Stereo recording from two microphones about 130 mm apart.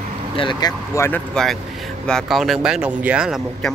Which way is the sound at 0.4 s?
35° left (ahead or behind).